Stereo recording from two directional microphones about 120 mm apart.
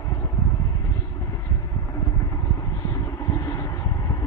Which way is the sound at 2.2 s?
25° left (ahead or behind).